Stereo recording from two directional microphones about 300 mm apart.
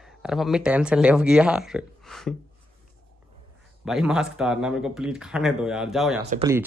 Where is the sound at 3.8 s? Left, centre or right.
Centre.